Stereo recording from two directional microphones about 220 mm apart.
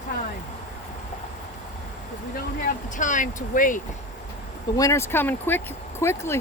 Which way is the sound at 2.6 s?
35° left (ahead or behind).